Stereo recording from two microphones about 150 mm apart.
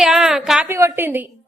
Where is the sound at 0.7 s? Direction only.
20° right (ahead or behind).